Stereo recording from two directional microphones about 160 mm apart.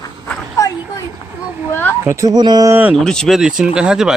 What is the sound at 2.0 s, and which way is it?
Speech, 20° right (ahead or behind).